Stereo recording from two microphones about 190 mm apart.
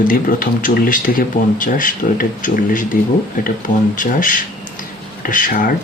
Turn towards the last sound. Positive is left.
turn(degrees=45)  # may be behind; listen again after turning